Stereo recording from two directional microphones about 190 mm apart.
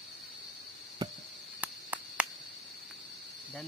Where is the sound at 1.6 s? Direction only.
10° right (ahead or behind).